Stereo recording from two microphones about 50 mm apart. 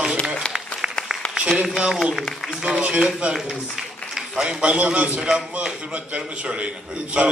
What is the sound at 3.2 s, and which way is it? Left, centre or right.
A man's voice, centre.